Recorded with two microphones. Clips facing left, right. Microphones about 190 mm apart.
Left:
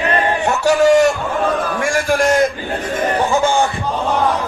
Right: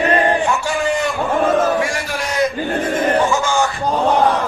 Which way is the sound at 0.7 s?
45° left (ahead or behind).